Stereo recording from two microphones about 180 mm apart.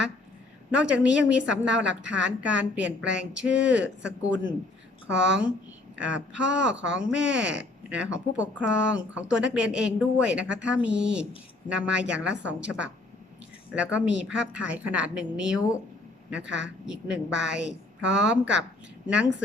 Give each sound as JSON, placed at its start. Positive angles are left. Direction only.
{"t": 0.8, "sound": "a woman's voice", "side_deg": -5}
{"t": 16.4, "sound": "a woman's voice", "side_deg": -80}
{"t": 16.8, "sound": "a woman's voice", "side_deg": -5}